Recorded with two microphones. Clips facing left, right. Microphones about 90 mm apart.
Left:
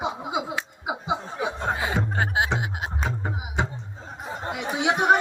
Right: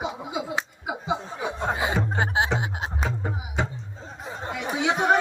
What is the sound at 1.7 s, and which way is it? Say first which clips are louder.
Music: right 1 dB; 20° right (ahead or behind).